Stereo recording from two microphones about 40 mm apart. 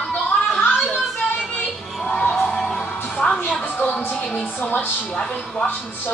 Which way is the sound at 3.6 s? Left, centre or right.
Left.